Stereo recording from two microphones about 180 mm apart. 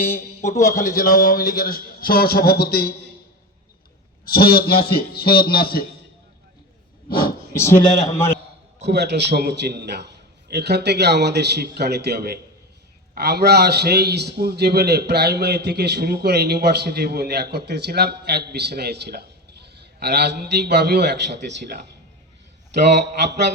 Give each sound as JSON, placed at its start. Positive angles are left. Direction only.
{"t": 0.0, "sound": "a man's voice", "side_deg": 55}
{"t": 4.3, "sound": "a man's voice", "side_deg": 55}
{"t": 7.1, "sound": "speech", "side_deg": 55}
{"t": 7.6, "sound": "a man's voice", "side_deg": 15}
{"t": 8.9, "sound": "a man's voice", "side_deg": -70}